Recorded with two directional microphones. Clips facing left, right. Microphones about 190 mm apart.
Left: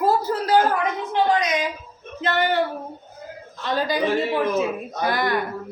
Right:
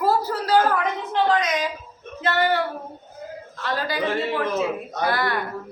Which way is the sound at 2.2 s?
20° left (ahead or behind).